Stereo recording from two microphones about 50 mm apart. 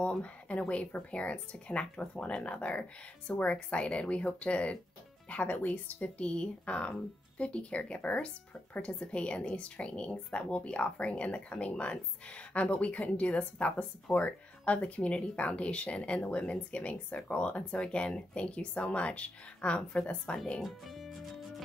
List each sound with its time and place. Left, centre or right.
0.0 s a woman's voice: left
6.0 s a woman's voice: left
20.6 s music: centre